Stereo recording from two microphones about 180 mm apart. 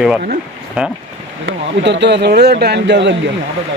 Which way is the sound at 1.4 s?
75° right (ahead or behind).